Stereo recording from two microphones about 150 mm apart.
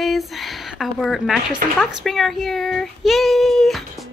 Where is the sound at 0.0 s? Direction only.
Centre (ahead or behind).